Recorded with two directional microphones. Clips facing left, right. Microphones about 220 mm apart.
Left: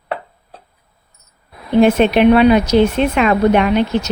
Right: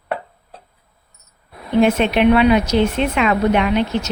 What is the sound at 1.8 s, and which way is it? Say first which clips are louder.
Speech: left 4 dB; 40° left (ahead or behind).